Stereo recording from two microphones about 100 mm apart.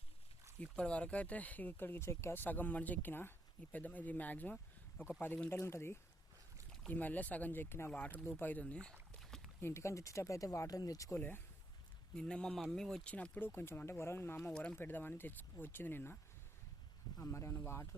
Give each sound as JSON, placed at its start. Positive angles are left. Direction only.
{"t": 0.6, "sound": "speech", "side_deg": 10}
{"t": 9.6, "sound": "speech", "side_deg": 25}
{"t": 11.1, "sound": "speech", "side_deg": 20}
{"t": 12.1, "sound": "speech", "side_deg": 10}
{"t": 14.5, "sound": "speech", "side_deg": 10}
{"t": 14.8, "sound": "speech", "side_deg": 20}
{"t": 17.2, "sound": "speech", "side_deg": 30}